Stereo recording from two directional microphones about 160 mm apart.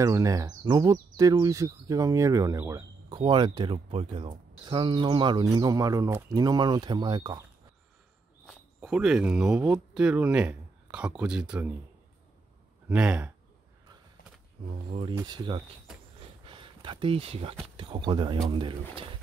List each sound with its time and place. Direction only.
0.0 s speech: 20° right (ahead or behind)
8.5 s speech: 5° right (ahead or behind)
12.8 s speech: 10° right (ahead or behind)
14.7 s speech: 40° right (ahead or behind)
15.1 s speech: 25° right (ahead or behind)
16.4 s a sound: 30° right (ahead or behind)
17.7 s speech: 30° right (ahead or behind)